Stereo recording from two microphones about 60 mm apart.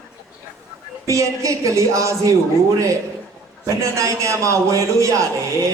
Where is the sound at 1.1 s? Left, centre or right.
Right.